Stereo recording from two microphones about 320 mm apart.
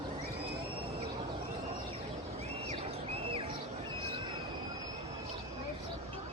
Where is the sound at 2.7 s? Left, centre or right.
Centre.